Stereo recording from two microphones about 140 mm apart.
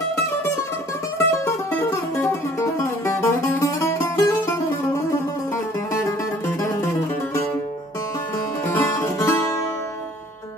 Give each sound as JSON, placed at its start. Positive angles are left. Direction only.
{"t": 1.1, "sound": "music", "side_deg": 15}
{"t": 6.0, "sound": "music", "side_deg": 20}
{"t": 8.7, "sound": "music", "side_deg": 15}